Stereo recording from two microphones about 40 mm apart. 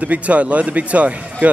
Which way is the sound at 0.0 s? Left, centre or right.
Right.